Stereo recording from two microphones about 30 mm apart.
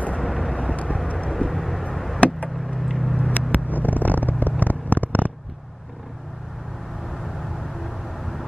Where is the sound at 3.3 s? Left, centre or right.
Left.